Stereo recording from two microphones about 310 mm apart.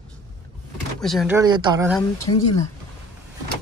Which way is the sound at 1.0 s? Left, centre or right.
Centre.